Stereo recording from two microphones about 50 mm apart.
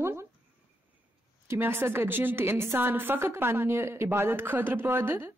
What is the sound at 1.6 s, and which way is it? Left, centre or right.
Speech, right.